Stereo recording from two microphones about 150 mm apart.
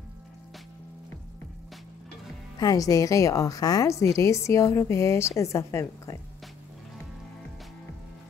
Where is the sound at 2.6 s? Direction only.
25° left (ahead or behind).